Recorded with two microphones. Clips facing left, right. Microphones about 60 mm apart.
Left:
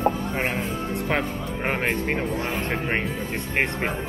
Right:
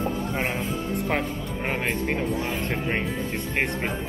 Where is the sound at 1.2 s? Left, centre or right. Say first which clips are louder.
Left 2 dB; left.